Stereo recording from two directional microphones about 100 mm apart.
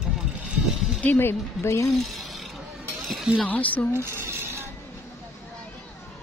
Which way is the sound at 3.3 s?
15° left (ahead or behind).